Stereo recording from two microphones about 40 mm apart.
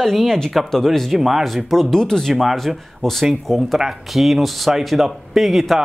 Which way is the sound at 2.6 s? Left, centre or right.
Centre.